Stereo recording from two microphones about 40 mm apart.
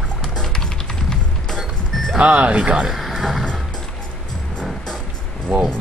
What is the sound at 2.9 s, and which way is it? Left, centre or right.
Speech, centre.